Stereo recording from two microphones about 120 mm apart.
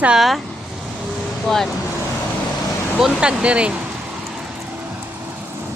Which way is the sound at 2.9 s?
5° right (ahead or behind).